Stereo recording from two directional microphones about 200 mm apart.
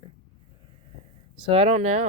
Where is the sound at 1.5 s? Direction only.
30° right (ahead or behind).